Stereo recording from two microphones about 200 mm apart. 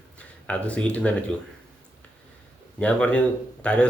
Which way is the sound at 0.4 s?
5° left (ahead or behind).